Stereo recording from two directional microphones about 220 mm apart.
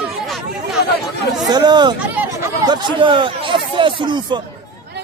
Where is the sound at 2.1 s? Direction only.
10° right (ahead or behind).